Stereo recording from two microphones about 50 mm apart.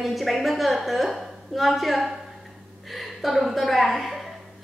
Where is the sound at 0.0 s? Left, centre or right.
Centre.